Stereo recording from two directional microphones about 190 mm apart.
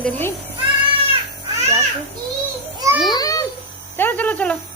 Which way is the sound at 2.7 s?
15° right (ahead or behind).